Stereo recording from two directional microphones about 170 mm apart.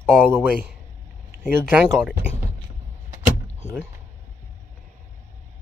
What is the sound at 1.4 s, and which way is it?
Speech, 10° right (ahead or behind).